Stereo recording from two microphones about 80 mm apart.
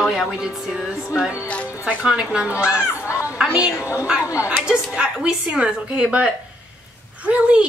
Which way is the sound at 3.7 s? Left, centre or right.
Left.